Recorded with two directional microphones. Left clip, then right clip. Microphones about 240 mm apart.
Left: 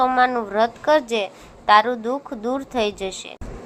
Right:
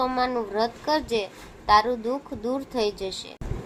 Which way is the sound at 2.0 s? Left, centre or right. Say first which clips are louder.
Left 4 dB; left.